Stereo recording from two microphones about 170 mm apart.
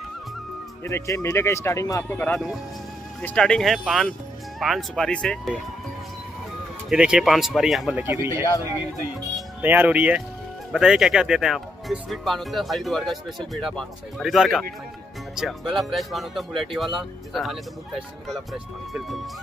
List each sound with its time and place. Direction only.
0.8 s speech: 15° left (ahead or behind); by 5.6 s centre (ahead or behind)
6.9 s speech: 5° right (ahead or behind)
8.0 s speech: 15° right (ahead or behind)
9.6 s speech: 10° right (ahead or behind)